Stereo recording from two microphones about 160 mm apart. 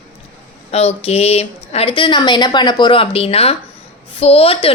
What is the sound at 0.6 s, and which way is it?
Speech, 40° left (ahead or behind).